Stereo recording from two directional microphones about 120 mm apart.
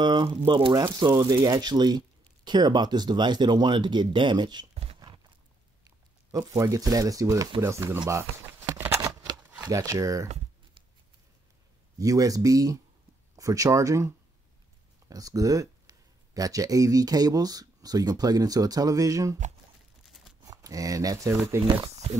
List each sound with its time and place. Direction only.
0.0 s speech: 40° right (ahead or behind)
5.9 s speech: 30° right (ahead or behind)
8.1 s a sound: 20° right (ahead or behind)
9.7 s speech: 25° right (ahead or behind)
12.0 s speech: 30° right (ahead or behind)
20.4 s speech: 30° right (ahead or behind)